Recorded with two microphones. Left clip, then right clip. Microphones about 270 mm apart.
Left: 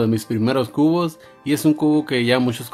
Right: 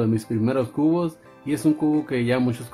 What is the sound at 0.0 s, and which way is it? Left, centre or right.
Speech, centre.